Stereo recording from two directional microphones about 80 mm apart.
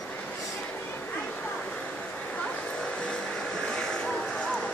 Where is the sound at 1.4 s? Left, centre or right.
Centre.